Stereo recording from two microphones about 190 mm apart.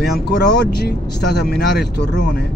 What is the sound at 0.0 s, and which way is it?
Speech, 60° left (ahead or behind).